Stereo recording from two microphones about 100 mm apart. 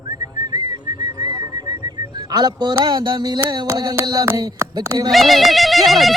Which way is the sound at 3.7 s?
35° right (ahead or behind).